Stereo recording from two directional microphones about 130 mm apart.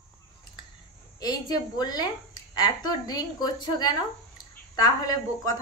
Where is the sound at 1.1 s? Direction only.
30° left (ahead or behind).